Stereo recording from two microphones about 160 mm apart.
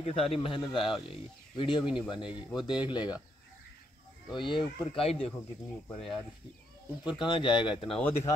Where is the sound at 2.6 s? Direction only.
30° left (ahead or behind).